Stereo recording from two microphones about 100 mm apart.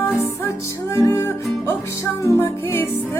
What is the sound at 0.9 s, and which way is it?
Music, 30° left (ahead or behind).